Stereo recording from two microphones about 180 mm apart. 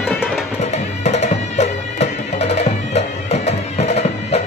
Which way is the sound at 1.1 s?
40° left (ahead or behind).